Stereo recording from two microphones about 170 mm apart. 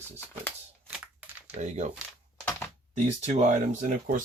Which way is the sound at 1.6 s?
40° right (ahead or behind).